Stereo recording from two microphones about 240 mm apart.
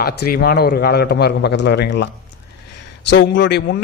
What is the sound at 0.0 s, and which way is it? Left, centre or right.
A man's voice, left.